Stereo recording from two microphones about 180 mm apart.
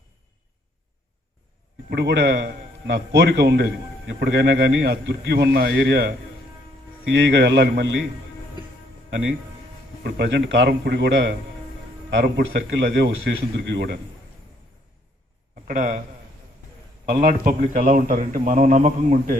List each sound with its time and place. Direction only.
1.9 s speech: 70° right (ahead or behind)
10.0 s speech: 70° right (ahead or behind)
12.1 s a man's voice: 85° right
15.6 s a man's voice: 45° right (ahead or behind)
17.1 s a man's voice: 50° right (ahead or behind)